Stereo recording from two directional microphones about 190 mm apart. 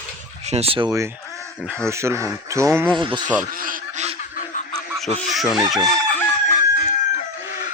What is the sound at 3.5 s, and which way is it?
Honk, 45° right (ahead or behind).